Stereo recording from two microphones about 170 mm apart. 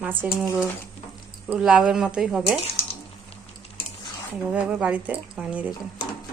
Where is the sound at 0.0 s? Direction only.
10° right (ahead or behind).